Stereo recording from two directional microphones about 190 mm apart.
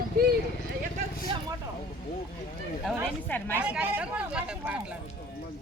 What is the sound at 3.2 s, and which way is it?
Speech, 10° left (ahead or behind).